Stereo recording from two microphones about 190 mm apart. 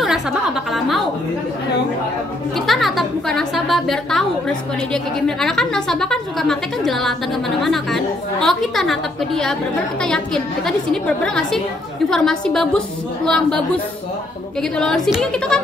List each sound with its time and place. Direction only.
0.7 s a woman's voice: centre (ahead or behind)
2.5 s a woman's voice: centre (ahead or behind)
14.6 s a woman's voice: 5° left (ahead or behind)